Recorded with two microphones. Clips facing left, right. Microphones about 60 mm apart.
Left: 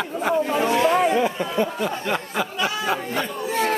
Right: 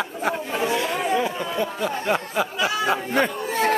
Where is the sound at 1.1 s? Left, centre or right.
Centre.